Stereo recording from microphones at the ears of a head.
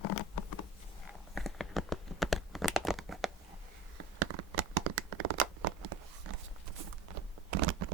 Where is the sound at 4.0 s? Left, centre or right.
Right.